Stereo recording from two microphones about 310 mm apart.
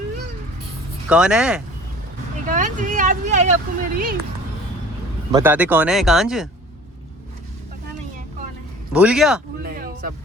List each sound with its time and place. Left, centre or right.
1.1 s speech: centre
2.5 s speech: right
5.3 s speech: centre
8.9 s speech: centre
9.6 s a sound: right